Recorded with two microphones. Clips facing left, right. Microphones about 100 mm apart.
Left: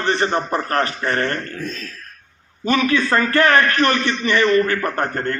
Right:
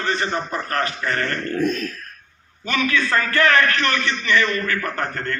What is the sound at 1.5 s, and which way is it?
Speech, 55° right (ahead or behind).